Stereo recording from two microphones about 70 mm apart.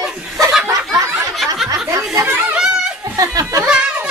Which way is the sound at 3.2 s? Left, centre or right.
Right.